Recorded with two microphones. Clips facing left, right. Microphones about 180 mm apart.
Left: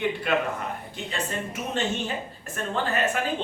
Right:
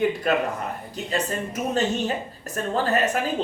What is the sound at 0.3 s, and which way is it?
Speech, 40° right (ahead or behind).